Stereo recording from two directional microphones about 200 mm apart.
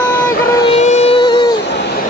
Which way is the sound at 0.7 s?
35° left (ahead or behind).